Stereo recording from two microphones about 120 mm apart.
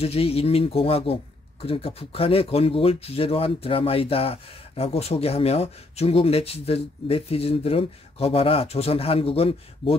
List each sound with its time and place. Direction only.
0.0 s speech: 55° left (ahead or behind)